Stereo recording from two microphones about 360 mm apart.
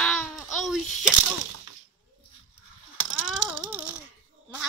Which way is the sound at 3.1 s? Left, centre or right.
Centre.